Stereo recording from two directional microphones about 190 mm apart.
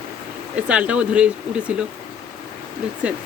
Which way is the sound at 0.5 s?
5° right (ahead or behind).